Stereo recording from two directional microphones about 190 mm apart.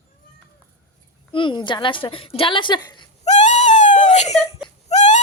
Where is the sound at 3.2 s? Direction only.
40° left (ahead or behind).